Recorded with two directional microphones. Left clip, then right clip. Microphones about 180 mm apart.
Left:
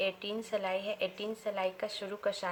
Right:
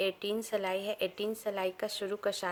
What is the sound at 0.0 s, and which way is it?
Speech, 60° right (ahead or behind).